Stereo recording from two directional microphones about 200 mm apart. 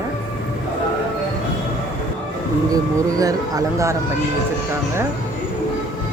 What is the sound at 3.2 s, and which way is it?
Speech, 15° right (ahead or behind).